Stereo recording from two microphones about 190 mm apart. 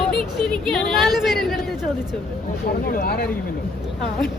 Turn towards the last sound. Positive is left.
turn(degrees=50)  # may be behind; listen again after turning